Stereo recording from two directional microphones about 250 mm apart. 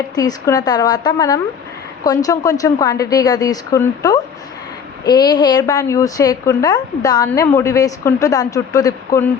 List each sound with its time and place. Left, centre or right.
0.2 s a woman's voice: centre